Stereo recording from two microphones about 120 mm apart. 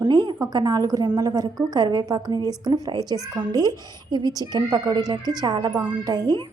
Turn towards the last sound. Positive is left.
turn(degrees=-35)  # may be behind; listen again after turning